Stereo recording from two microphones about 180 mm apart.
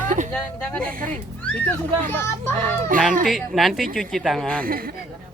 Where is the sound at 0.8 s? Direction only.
50° right (ahead or behind).